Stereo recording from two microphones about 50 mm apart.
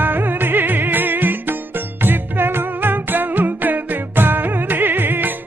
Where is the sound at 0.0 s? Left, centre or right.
Right.